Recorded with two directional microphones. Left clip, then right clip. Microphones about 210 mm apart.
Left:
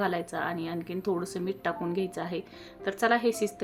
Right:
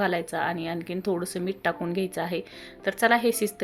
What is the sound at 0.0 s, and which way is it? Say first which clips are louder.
Speech: right 4 dB; 15° right (ahead or behind).